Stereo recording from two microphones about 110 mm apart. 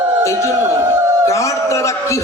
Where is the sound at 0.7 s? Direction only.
25° right (ahead or behind).